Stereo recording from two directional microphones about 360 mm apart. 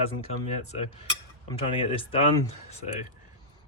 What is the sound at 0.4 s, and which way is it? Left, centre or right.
Speech, centre.